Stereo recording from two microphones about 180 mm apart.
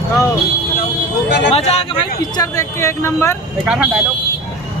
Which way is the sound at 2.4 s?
15° left (ahead or behind).